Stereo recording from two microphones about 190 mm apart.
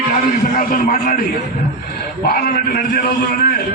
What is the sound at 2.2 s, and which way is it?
A man's voice, 50° left (ahead or behind).